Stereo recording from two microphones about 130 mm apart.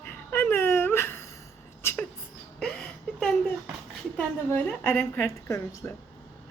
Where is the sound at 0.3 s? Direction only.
15° left (ahead or behind).